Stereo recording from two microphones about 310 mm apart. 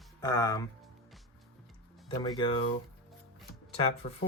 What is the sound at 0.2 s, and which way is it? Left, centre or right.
Speech, centre.